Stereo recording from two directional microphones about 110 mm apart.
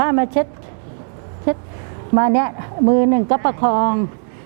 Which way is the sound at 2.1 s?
20° right (ahead or behind).